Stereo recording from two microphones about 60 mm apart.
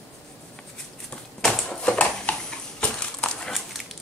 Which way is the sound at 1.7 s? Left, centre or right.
Centre.